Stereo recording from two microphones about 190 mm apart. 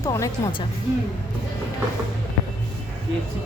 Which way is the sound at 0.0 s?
15° left (ahead or behind).